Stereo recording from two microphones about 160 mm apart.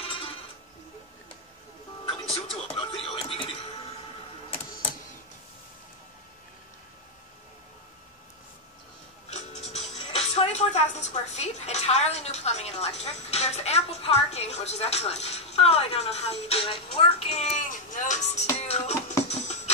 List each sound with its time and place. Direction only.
2.0 s music: 35° left (ahead or behind)
9.3 s speech: 45° left (ahead or behind)
19.2 s music: 45° left (ahead or behind)